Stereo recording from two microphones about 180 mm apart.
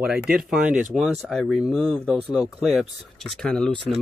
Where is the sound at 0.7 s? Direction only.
45° right (ahead or behind).